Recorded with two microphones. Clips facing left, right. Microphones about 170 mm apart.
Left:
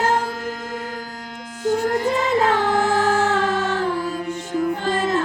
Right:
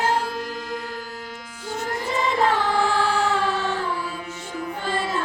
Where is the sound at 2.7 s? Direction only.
45° left (ahead or behind).